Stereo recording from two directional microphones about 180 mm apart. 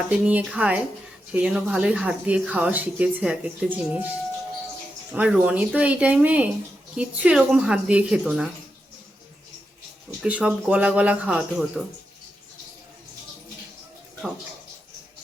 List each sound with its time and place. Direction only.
0.1 s speech: 10° right (ahead or behind)
5.1 s a woman's voice: 10° right (ahead or behind)
10.2 s speech: 5° right (ahead or behind)